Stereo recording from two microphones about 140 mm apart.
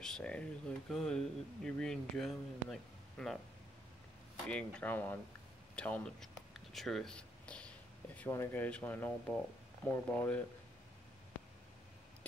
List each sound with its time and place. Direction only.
0.0 s speech: 5° left (ahead or behind)
4.5 s speech: 10° left (ahead or behind)
6.5 s a sound: centre (ahead or behind)
8.2 s speech: 15° left (ahead or behind)